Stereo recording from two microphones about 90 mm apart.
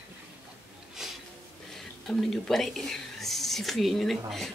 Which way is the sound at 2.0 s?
5° left (ahead or behind).